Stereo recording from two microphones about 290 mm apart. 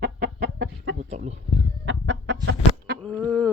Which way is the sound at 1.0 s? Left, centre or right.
Right.